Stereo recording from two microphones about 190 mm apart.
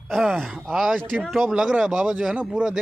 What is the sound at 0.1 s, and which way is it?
Speech, centre (ahead or behind).